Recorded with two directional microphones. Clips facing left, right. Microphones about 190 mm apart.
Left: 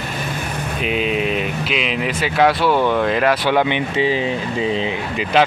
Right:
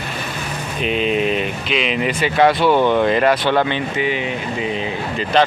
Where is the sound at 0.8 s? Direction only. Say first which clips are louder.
Right 2 dB; 5° left (ahead or behind).